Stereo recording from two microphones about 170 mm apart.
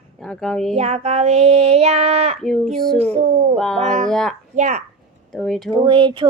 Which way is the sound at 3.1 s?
40° right (ahead or behind).